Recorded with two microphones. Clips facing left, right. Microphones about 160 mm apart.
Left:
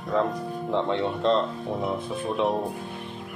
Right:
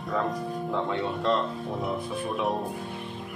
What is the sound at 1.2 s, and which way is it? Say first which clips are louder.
Speech: left 3 dB; 20° left (ahead or behind).